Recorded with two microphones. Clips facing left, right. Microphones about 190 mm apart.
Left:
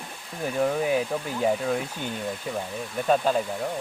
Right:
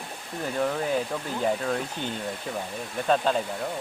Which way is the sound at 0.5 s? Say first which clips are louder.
Left 3 dB; 10° left (ahead or behind).